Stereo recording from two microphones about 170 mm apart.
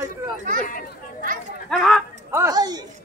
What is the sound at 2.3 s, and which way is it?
Speech, 20° right (ahead or behind).